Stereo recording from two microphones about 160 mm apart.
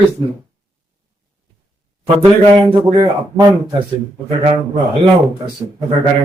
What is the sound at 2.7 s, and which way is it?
A man's voice, 30° right (ahead or behind).